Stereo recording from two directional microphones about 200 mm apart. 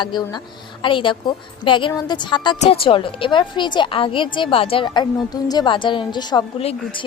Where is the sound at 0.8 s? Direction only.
25° left (ahead or behind).